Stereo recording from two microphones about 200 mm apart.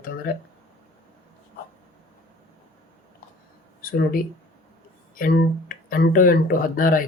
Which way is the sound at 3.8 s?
45° left (ahead or behind).